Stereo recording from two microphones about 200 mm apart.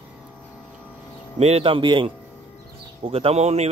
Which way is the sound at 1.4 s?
30° right (ahead or behind).